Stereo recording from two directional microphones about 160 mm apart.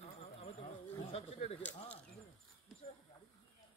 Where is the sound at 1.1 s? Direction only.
45° left (ahead or behind).